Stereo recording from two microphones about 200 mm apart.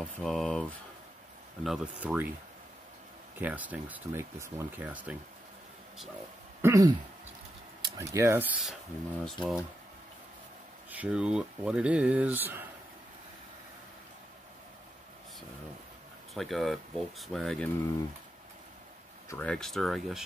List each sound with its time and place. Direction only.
0.2 s speech: centre (ahead or behind)
3.3 s speech: 10° right (ahead or behind)
6.6 s speech: 15° right (ahead or behind); by 9.7 s 5° left (ahead or behind)
10.9 s speech: 5° right (ahead or behind)
16.3 s speech: centre (ahead or behind)
19.2 s speech: 5° left (ahead or behind)